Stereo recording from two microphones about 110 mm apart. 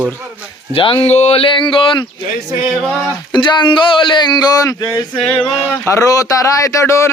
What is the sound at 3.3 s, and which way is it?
Speech, 45° left (ahead or behind).